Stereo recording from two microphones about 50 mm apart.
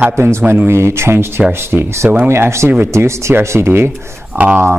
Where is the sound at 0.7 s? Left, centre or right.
Right.